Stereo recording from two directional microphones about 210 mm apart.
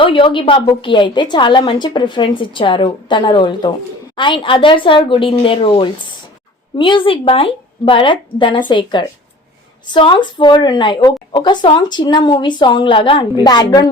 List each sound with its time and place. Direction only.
0.0 s a woman's voice: 25° left (ahead or behind)